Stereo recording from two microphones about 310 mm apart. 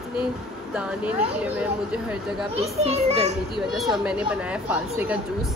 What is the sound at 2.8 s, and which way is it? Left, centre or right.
Speech, centre.